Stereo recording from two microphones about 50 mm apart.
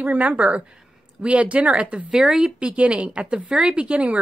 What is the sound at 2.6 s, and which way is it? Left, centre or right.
Speech, right.